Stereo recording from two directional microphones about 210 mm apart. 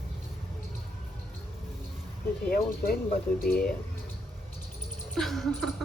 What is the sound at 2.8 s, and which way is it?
Speech, 45° left (ahead or behind).